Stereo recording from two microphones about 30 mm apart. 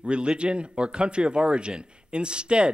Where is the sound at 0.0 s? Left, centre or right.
Right.